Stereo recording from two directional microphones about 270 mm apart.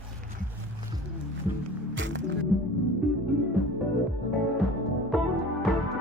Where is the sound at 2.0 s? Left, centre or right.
Right.